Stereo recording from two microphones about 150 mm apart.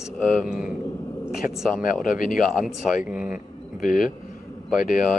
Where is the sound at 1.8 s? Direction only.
70° left (ahead or behind).